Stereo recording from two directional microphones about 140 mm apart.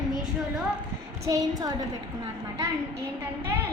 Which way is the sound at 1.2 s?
25° right (ahead or behind).